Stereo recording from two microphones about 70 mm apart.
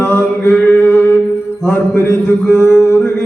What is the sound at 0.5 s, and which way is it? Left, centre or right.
Chant, left.